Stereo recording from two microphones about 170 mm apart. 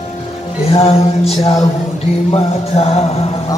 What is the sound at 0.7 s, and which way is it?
Music, 35° left (ahead or behind).